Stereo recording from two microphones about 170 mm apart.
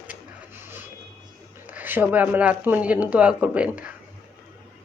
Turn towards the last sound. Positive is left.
turn(degrees=-5)  # may be behind; listen again after turning